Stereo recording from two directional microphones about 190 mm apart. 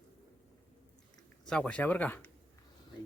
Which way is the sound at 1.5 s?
5° left (ahead or behind).